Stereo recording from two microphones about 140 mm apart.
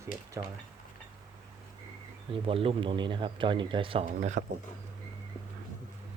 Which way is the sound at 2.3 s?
40° right (ahead or behind).